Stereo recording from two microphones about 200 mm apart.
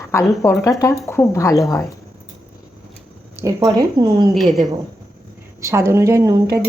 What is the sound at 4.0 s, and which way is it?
Speech, 25° right (ahead or behind).